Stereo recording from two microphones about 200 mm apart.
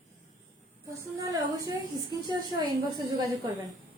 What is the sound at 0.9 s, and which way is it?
A woman's voice, 15° right (ahead or behind).